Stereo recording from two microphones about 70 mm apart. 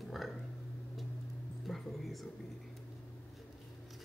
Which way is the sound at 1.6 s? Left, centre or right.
Centre.